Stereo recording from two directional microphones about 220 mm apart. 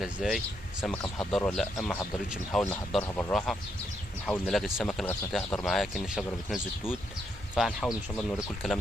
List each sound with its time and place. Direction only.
0.0 s speech: centre (ahead or behind)